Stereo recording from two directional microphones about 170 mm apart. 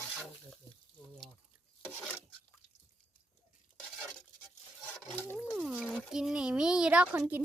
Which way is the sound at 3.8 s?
5° left (ahead or behind).